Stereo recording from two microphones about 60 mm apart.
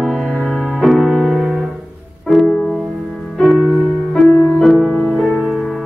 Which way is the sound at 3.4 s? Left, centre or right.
Centre.